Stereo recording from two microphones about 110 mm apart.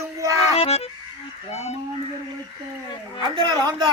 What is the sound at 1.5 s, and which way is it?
Speech, 80° left.